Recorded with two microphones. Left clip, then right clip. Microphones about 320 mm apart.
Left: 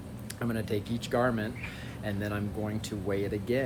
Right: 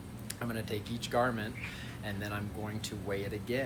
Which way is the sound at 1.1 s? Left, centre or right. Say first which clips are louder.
Left 2 dB; left.